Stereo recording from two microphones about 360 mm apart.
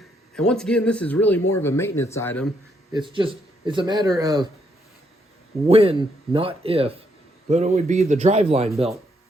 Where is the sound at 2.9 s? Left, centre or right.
Centre.